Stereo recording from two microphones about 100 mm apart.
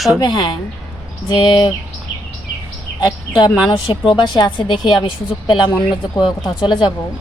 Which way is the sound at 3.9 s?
60° left (ahead or behind).